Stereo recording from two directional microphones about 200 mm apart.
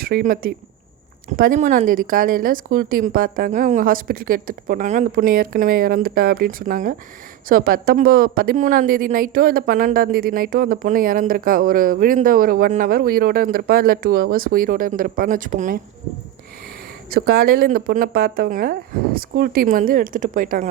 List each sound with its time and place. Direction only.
0.0 s a woman's voice: 45° right (ahead or behind)
17.1 s a woman's voice: 50° right (ahead or behind)